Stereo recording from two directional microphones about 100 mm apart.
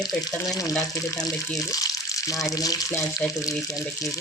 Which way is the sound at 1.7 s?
35° left (ahead or behind).